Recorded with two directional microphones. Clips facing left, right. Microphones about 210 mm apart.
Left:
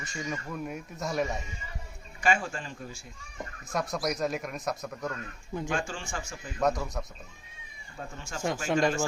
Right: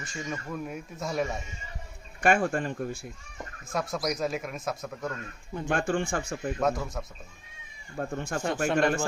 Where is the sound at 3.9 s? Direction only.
Centre (ahead or behind).